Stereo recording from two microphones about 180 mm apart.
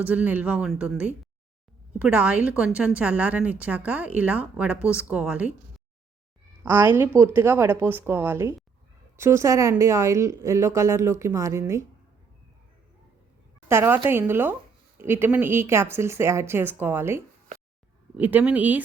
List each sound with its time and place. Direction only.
0.0 s a woman's voice: 10° right (ahead or behind)
6.6 s a woman's voice: 10° right (ahead or behind)
13.7 s a woman's voice: 15° right (ahead or behind)